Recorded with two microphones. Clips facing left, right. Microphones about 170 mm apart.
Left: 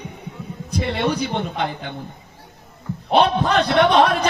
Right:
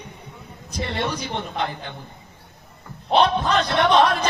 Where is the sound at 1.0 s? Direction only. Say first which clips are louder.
Left 5 dB; 65° left (ahead or behind).